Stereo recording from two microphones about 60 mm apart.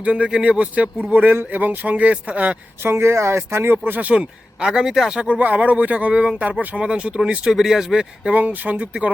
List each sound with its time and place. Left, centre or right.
0.0 s speech: centre
2.8 s speech: right
4.1 s speech: centre
5.3 s speech: right; by 8.3 s centre
8.3 s speech: right